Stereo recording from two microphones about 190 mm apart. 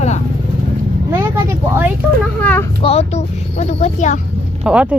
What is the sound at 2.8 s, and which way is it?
Speech, 35° left (ahead or behind).